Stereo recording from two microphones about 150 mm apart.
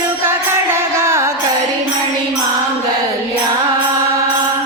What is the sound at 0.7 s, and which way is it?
Music, 15° right (ahead or behind).